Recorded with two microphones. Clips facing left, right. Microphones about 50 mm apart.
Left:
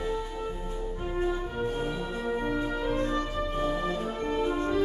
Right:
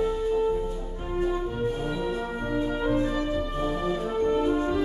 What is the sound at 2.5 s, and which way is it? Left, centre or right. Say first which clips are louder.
Brass instrument: right 4 dB; centre.